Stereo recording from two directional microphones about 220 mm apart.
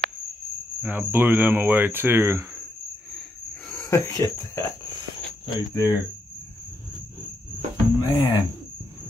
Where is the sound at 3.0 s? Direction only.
Centre (ahead or behind).